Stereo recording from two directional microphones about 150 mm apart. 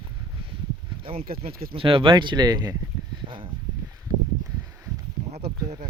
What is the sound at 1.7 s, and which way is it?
Speech, 35° right (ahead or behind).